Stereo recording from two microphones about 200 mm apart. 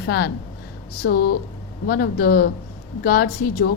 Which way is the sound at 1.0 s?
50° left (ahead or behind).